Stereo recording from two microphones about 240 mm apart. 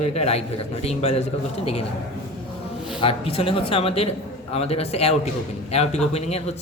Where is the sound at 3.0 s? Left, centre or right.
Left.